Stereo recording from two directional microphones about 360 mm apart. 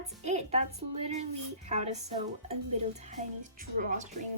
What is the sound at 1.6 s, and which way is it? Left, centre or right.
A woman's voice, centre.